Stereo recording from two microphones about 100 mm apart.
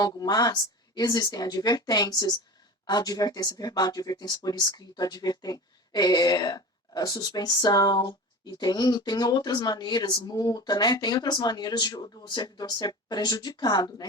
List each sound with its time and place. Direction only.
0.0 s speech: 40° left (ahead or behind)